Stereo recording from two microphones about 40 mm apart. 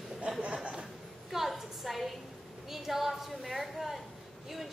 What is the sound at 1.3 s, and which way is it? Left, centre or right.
A woman's voice, centre.